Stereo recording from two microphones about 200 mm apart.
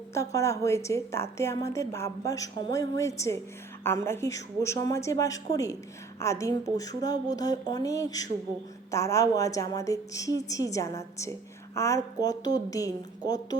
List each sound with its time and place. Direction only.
0.3 s a woman's voice: 15° left (ahead or behind)